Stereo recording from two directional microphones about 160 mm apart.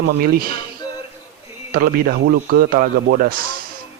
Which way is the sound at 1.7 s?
65° right (ahead or behind).